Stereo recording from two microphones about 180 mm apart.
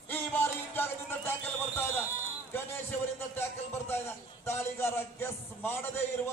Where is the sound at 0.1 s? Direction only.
10° left (ahead or behind).